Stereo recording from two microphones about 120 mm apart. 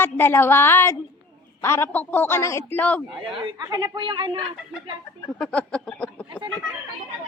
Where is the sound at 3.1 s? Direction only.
50° right (ahead or behind).